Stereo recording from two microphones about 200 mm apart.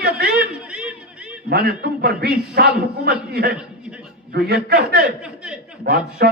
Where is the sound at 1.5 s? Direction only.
55° right (ahead or behind).